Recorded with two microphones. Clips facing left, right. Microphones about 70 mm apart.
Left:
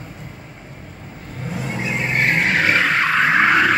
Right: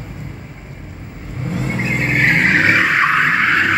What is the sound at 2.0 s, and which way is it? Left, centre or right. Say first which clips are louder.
Vehicle: right 4 dB; right.